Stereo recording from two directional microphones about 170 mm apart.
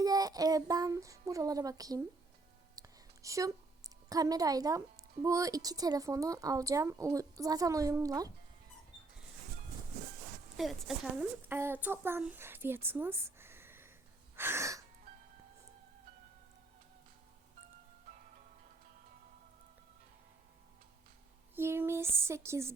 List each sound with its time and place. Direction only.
0.0 s speech: 20° right (ahead or behind)
2.7 s a sound: 20° right (ahead or behind)
5.2 s speech: 20° right (ahead or behind)
10.6 s speech: centre (ahead or behind)
14.3 s gasp: 15° right (ahead or behind)
21.5 s speech: 15° right (ahead or behind)